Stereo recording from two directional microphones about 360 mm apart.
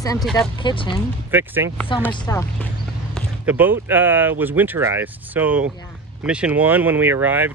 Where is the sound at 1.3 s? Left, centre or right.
Centre.